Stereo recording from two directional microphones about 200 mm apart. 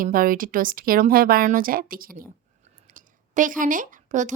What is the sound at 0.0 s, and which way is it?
Speech, 45° right (ahead or behind).